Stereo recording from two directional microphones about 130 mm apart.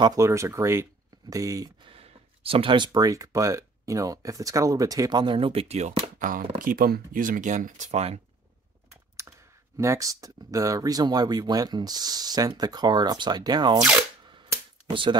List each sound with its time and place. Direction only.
0.0 s speech: 25° right (ahead or behind)
1.9 s speech: 45° right (ahead or behind)
9.8 s speech: 25° right (ahead or behind)
14.9 s speech: 40° right (ahead or behind)